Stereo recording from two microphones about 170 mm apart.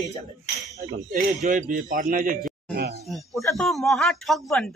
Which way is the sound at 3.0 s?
Centre (ahead or behind).